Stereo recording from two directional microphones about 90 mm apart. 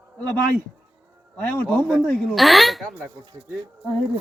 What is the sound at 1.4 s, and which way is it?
Speech, 20° left (ahead or behind).